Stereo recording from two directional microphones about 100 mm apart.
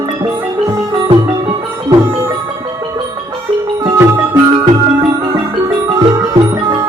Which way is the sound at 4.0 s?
35° right (ahead or behind).